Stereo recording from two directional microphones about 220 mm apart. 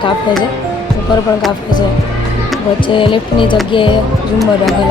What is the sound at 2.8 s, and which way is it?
Speech, 20° left (ahead or behind).